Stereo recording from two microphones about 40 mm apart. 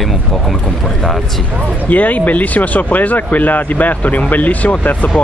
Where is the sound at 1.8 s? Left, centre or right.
Left.